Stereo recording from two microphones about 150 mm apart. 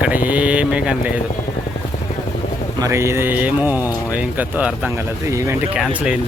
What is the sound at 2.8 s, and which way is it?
Speech, 15° right (ahead or behind).